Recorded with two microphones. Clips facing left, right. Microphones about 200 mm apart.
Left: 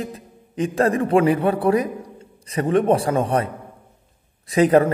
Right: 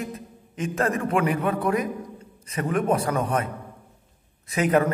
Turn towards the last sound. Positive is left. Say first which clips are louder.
# left 6 dB
turn(degrees=35)  # may be behind; listen again after turning